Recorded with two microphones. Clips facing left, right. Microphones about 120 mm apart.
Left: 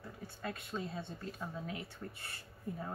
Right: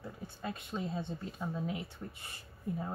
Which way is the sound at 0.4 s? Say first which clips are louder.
Right 2 dB; 20° right (ahead or behind).